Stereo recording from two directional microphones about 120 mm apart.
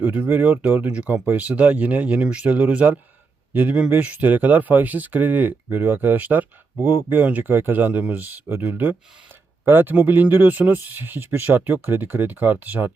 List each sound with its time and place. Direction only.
0.0 s speech: 15° right (ahead or behind)